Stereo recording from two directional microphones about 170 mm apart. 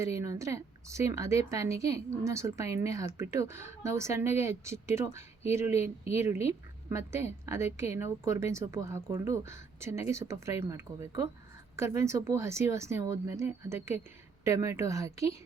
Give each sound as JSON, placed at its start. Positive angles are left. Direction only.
{"t": 0.0, "sound": "a woman's voice", "side_deg": -20}